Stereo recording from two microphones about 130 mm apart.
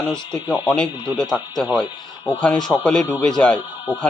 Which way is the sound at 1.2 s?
30° left (ahead or behind).